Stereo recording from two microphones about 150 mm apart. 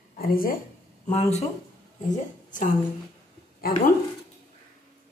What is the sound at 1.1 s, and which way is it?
Speech, 45° left (ahead or behind).